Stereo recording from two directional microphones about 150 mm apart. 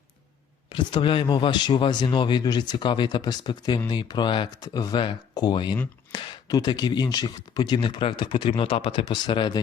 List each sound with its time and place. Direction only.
0.7 s a man's voice: 30° left (ahead or behind)